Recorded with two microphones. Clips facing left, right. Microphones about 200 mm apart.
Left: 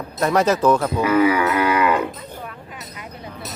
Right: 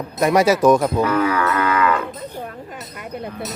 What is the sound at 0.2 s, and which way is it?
Speech, 10° right (ahead or behind).